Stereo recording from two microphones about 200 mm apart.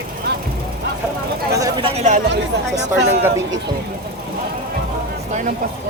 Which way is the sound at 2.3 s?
60° right (ahead or behind).